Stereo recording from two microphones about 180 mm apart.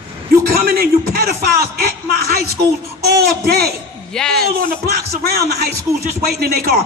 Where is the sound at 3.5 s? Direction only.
60° right (ahead or behind).